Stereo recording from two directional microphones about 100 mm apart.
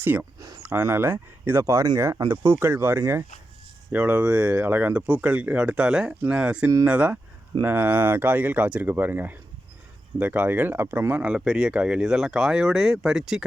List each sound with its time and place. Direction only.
0.0 s speech: 20° right (ahead or behind)
0.3 s a sound: 35° right (ahead or behind)
0.6 s speech: 20° right (ahead or behind); by 13.4 s 5° right (ahead or behind)